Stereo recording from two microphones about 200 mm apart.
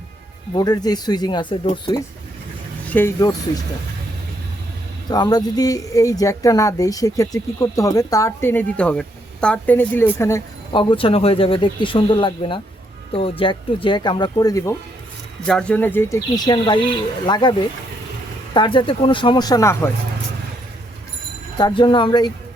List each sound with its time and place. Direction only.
0.5 s speech: 20° left (ahead or behind)
5.0 s speech: 20° left (ahead or behind)
10.7 s speech: 25° left (ahead or behind)
15.4 s speech: 5° left (ahead or behind); by 17.5 s 20° left (ahead or behind)
18.5 s speech: 25° left (ahead or behind)
21.6 s speech: 25° left (ahead or behind)